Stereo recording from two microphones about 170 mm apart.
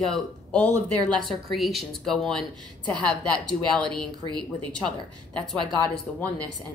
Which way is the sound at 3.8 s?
25° right (ahead or behind).